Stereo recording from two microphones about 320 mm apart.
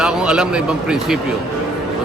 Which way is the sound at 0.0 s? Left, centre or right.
Centre.